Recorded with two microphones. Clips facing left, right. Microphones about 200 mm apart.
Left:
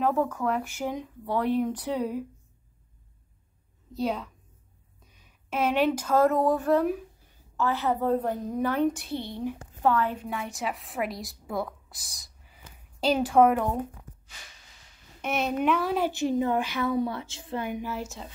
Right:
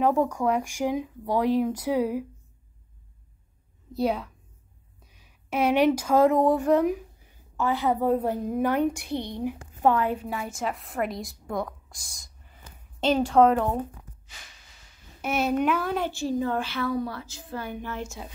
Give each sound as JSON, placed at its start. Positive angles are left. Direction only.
{"t": 0.0, "sound": "a woman's voice", "side_deg": -15}
{"t": 3.9, "sound": "a woman's voice", "side_deg": -10}
{"t": 5.5, "sound": "a woman's voice", "side_deg": -10}
{"t": 15.2, "sound": "speech", "side_deg": -5}
{"t": 16.1, "sound": "a woman's voice", "side_deg": 20}
{"t": 17.6, "sound": "a woman's voice", "side_deg": 10}